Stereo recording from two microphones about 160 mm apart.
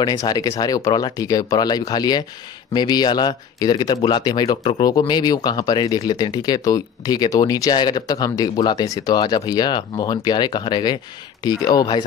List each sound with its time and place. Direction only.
0.0 s speech: 25° left (ahead or behind)